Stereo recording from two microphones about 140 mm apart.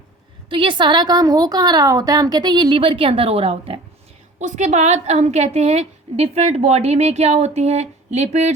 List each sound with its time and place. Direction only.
0.5 s a woman's voice: 35° right (ahead or behind)
4.4 s a woman's voice: 55° right (ahead or behind)